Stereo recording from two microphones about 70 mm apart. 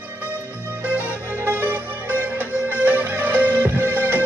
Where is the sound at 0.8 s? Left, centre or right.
Right.